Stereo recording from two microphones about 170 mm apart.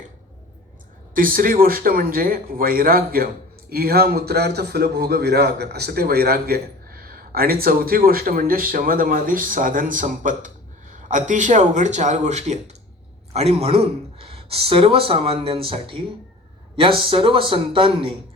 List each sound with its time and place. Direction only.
1.1 s a man's voice: 55° right (ahead or behind); by 18.1 s 30° right (ahead or behind)